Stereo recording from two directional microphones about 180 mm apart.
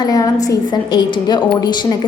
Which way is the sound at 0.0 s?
20° left (ahead or behind).